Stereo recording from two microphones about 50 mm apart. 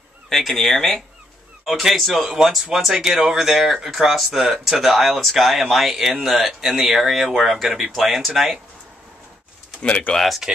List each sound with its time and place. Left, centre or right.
0.3 s speech: centre
9.8 s speech: left
10.1 s speech: centre